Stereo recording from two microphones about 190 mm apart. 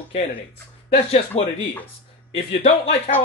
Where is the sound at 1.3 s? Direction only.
35° left (ahead or behind).